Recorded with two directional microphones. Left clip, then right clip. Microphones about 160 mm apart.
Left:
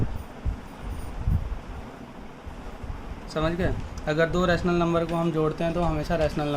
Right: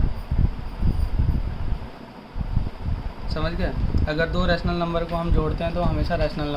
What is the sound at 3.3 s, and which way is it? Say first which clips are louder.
Speech: left 2 dB; 40° left (ahead or behind).